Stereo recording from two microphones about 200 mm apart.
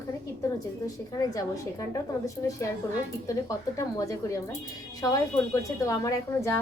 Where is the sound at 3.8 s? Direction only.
15° left (ahead or behind).